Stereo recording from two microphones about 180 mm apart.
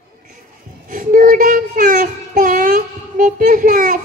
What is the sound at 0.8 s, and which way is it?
Child singing, 50° right (ahead or behind).